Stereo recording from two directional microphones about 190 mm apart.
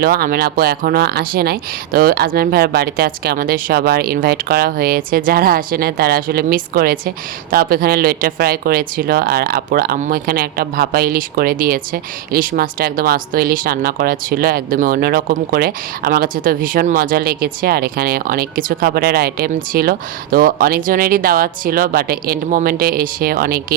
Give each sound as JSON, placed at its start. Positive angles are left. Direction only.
{"t": 0.0, "sound": "speech", "side_deg": -50}